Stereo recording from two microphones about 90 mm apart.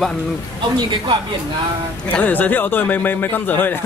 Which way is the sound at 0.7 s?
50° right (ahead or behind).